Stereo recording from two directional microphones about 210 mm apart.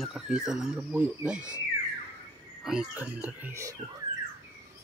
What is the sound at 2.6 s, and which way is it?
Speech, 5° right (ahead or behind).